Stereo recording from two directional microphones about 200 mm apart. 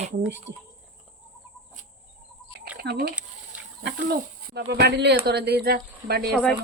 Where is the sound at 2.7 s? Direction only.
55° right (ahead or behind).